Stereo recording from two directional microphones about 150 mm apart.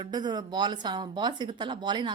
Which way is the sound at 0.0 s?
30° right (ahead or behind).